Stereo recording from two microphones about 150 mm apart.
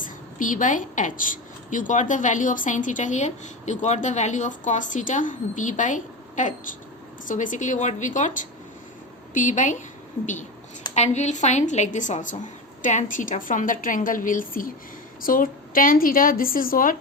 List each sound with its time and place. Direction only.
0.0 s a woman's voice: 60° left (ahead or behind)
9.3 s a woman's voice: 55° left (ahead or behind)
10.9 s a woman's voice: 50° left (ahead or behind); by 17.0 s 70° left (ahead or behind)